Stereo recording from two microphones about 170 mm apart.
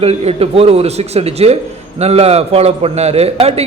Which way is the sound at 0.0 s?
35° right (ahead or behind).